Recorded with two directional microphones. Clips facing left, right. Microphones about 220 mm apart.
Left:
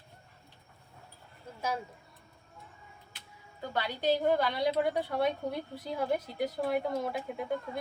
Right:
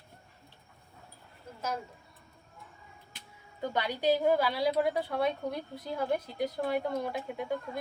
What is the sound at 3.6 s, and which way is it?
A woman's voice, 15° right (ahead or behind).